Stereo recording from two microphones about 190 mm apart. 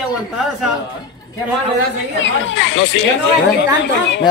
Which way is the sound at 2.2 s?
80° left.